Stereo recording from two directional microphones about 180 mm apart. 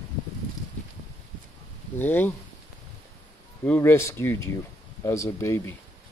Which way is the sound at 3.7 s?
15° left (ahead or behind).